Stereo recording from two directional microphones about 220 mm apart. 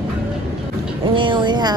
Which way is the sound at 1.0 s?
20° right (ahead or behind).